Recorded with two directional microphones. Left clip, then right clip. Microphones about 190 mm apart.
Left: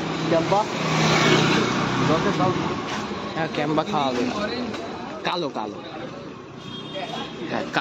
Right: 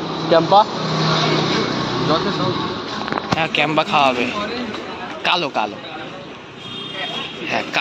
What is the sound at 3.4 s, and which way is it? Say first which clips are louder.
Speech: right 5 dB; centre (ahead or behind).